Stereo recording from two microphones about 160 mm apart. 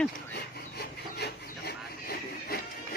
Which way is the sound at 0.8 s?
80° left.